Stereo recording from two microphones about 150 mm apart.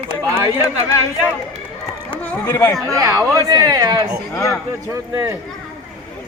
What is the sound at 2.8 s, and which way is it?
Speech, 25° right (ahead or behind).